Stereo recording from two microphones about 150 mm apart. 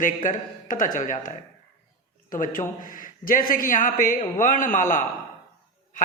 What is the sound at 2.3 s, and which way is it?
Speech, 65° left (ahead or behind).